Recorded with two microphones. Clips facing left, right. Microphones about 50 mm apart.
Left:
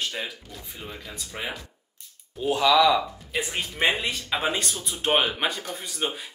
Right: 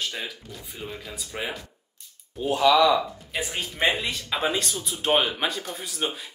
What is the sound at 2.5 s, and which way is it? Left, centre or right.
Speech, left.